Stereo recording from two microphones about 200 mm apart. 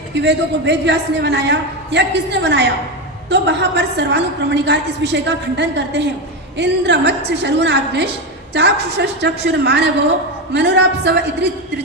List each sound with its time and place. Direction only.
0.1 s a woman's voice: 60° right (ahead or behind)